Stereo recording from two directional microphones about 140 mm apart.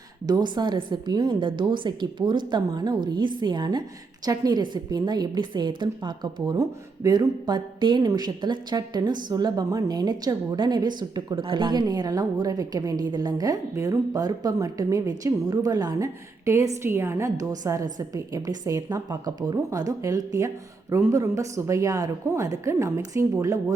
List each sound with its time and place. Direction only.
0.3 s a woman's voice: 30° right (ahead or behind)